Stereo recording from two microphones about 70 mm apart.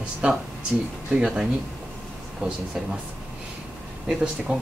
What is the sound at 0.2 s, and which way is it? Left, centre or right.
Speech, centre.